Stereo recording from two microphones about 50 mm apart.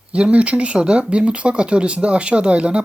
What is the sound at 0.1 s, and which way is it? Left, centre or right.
Speech, right.